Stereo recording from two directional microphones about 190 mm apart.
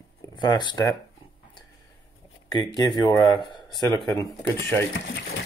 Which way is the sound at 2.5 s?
20° left (ahead or behind).